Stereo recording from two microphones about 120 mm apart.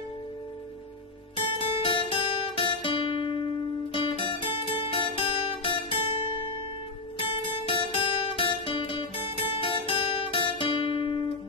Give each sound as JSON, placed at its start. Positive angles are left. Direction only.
{"t": 1.3, "sound": "guitar", "side_deg": 50}
{"t": 3.9, "sound": "music", "side_deg": 45}
{"t": 7.2, "sound": "music", "side_deg": 45}